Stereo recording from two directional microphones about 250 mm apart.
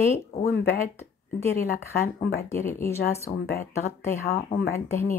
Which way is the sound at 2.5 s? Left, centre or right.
Centre.